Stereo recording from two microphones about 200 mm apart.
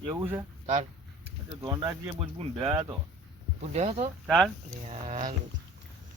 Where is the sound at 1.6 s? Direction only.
15° right (ahead or behind).